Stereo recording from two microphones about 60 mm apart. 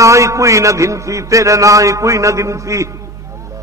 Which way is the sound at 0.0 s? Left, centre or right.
Right.